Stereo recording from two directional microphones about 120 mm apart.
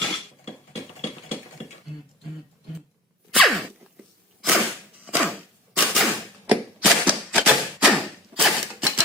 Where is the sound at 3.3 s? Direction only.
Centre (ahead or behind).